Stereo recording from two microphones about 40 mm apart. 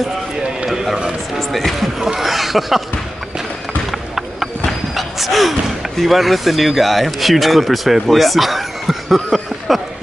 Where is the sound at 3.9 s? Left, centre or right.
Centre.